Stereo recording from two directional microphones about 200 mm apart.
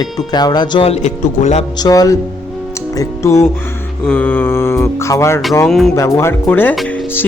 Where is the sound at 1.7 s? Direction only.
20° left (ahead or behind).